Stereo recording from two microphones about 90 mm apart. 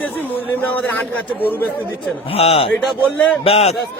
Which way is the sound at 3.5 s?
90° left.